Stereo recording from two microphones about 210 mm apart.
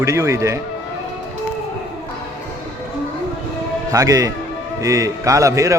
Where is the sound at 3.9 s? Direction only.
15° right (ahead or behind).